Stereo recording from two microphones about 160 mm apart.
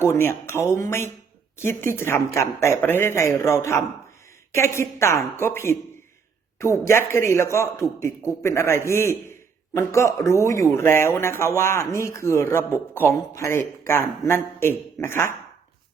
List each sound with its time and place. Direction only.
0.0 s speech: 15° left (ahead or behind)